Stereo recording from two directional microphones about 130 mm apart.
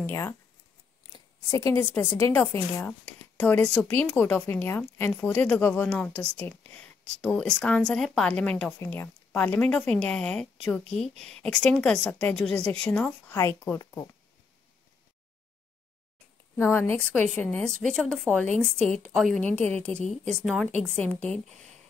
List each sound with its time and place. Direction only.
0.0 s speech: 20° left (ahead or behind)
1.1 s a sound: 25° left (ahead or behind)
1.9 s a woman's voice: 15° left (ahead or behind)
13.3 s speech: 20° left (ahead or behind)
16.7 s a woman's voice: 15° left (ahead or behind)